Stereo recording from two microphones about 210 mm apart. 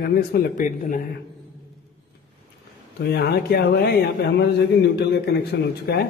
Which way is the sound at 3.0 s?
50° left (ahead or behind).